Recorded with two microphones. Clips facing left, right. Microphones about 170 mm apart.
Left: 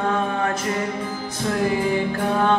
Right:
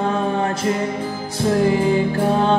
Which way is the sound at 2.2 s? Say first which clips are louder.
Right 3 dB; 30° right (ahead or behind).